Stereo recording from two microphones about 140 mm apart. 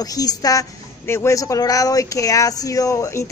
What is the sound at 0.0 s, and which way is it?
A woman's voice, 25° left (ahead or behind).